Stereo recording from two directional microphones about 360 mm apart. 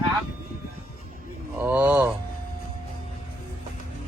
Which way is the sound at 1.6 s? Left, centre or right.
Centre.